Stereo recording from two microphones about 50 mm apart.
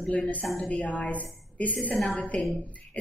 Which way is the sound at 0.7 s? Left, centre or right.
Left.